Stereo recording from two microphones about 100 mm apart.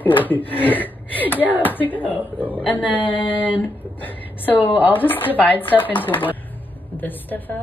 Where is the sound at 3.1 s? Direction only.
60° left (ahead or behind).